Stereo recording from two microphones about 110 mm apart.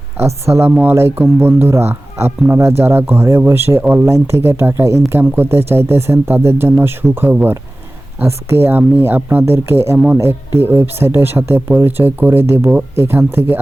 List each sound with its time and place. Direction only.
0.2 s speech: 25° right (ahead or behind)